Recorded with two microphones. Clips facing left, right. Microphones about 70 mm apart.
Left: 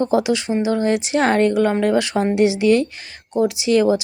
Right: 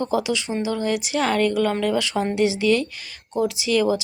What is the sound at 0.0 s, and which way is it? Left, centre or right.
Speech, left.